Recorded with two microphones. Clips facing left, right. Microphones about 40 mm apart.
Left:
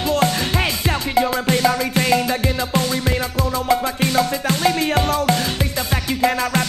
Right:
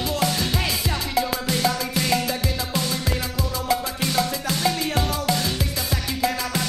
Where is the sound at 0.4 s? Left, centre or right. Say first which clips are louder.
Left 4 dB; left.